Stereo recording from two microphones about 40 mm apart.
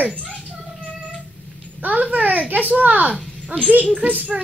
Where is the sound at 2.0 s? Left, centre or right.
Right.